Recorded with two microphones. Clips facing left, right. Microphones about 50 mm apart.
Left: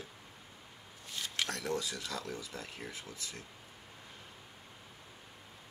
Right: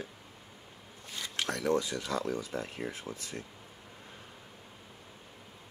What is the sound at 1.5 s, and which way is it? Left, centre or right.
Speech, right.